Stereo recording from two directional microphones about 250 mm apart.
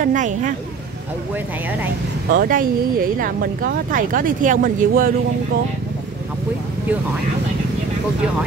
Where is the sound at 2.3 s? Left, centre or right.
Right.